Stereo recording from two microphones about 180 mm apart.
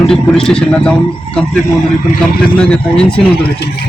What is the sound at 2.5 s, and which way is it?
Speech, 5° left (ahead or behind).